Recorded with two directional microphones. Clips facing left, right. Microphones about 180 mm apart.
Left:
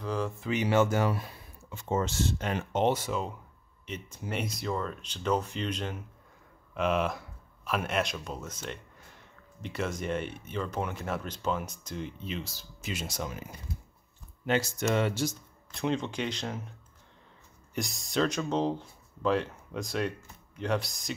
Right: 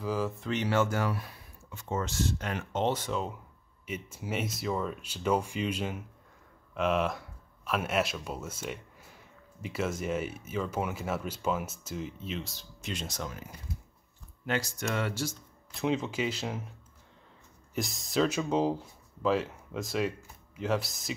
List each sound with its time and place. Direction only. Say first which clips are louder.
0.0 s speech: right 1 dB; 5° right (ahead or behind); by 15.3 s 20° left (ahead or behind)
15.7 s speech: right 1 dB; 5° right (ahead or behind)
17.7 s speech: right 1 dB; centre (ahead or behind)